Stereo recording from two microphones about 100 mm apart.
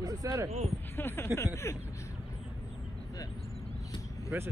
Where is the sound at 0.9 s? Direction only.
25° left (ahead or behind).